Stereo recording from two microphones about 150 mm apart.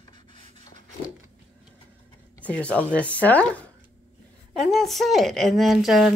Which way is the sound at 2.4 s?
10° left (ahead or behind).